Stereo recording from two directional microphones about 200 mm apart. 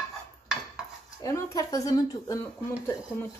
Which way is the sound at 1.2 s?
15° left (ahead or behind).